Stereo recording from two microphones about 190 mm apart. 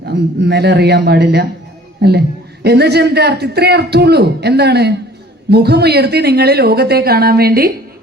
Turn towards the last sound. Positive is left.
turn(degrees=-55)  # may be behind; listen again after turning